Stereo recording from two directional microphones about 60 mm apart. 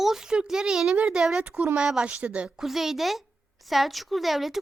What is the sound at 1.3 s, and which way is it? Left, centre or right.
A child's voice, centre.